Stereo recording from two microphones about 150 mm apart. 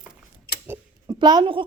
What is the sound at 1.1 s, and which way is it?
Speech, 30° right (ahead or behind).